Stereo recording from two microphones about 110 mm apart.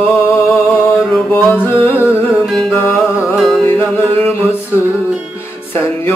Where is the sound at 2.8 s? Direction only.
25° left (ahead or behind).